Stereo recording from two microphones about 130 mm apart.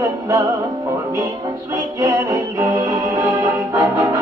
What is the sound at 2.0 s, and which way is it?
Music, 25° right (ahead or behind).